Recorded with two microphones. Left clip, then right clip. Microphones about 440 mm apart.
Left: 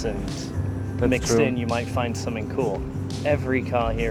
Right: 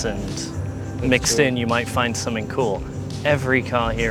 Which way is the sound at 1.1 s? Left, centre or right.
Right.